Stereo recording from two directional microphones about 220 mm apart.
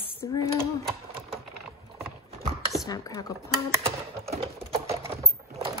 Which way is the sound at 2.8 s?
15° left (ahead or behind).